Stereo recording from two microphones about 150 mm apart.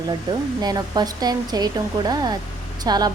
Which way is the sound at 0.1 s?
25° right (ahead or behind).